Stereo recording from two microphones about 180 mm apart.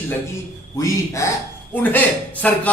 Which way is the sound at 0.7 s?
15° left (ahead or behind).